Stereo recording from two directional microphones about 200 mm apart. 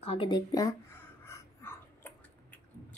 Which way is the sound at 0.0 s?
25° left (ahead or behind).